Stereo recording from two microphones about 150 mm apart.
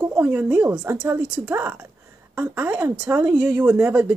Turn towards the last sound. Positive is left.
turn(degrees=-10)  # may be behind; listen again after turning